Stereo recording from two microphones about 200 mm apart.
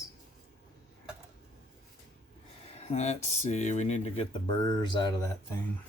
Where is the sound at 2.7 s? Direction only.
35° left (ahead or behind).